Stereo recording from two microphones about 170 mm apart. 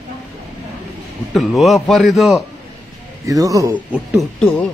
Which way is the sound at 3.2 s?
20° right (ahead or behind).